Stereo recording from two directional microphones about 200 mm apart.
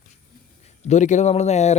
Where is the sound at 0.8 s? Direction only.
35° left (ahead or behind).